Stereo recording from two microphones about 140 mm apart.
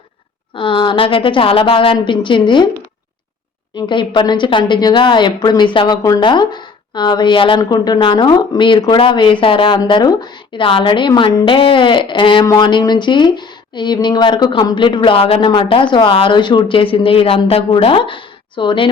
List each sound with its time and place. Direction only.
0.5 s a woman's voice: 35° left (ahead or behind)
3.8 s a woman's voice: 35° left (ahead or behind)